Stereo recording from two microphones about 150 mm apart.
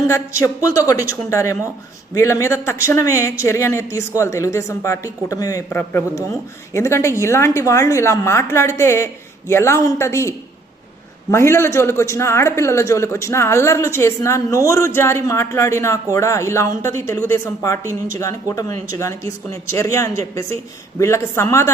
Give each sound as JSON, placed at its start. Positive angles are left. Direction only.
{"t": 0.1, "sound": "a man's voice", "side_deg": 20}